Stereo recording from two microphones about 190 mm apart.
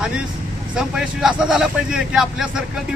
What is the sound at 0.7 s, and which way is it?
Speech, 5° right (ahead or behind).